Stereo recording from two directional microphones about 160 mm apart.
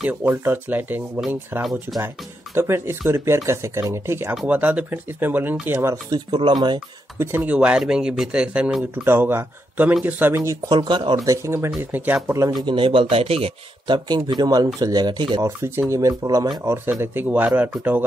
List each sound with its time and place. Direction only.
0.0 s speech: 15° right (ahead or behind)
1.6 s speech: centre (ahead or behind)
2.5 s speech: 15° right (ahead or behind)
7.2 s speech: 15° right (ahead or behind); by 11.1 s 30° right (ahead or behind)
11.2 s speech: 15° right (ahead or behind)
12.6 s a man's voice: 35° right (ahead or behind); by 18.0 s 10° right (ahead or behind)